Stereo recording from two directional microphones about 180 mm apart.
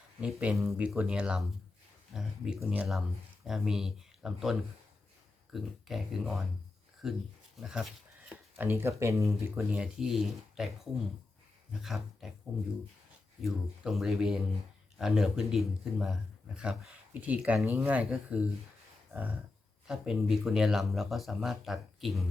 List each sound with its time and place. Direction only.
0.2 s speech: 5° right (ahead or behind)
9.7 s speech: 5° right (ahead or behind)
11.7 s speech: centre (ahead or behind)
13.4 s speech: centre (ahead or behind)